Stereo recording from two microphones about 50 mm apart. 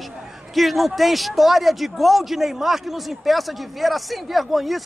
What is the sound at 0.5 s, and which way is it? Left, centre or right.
A man's voice, centre.